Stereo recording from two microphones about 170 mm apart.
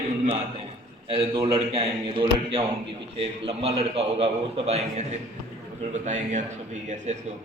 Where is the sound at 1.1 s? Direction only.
30° right (ahead or behind).